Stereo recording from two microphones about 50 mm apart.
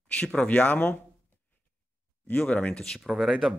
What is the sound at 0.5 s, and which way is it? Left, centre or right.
Speech, left.